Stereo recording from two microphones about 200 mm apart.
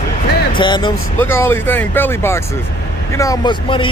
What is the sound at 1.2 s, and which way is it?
Speech, 10° left (ahead or behind).